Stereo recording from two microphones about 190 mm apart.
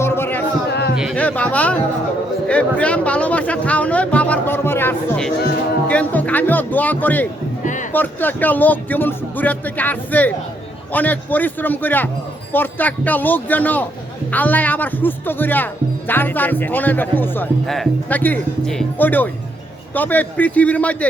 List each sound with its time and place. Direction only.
0.0 s music: 10° left (ahead or behind)
0.7 s music: 60° left (ahead or behind)
1.1 s speech: 5° left (ahead or behind)
7.6 s speech: 40° left (ahead or behind)
7.9 s speech: 10° left (ahead or behind)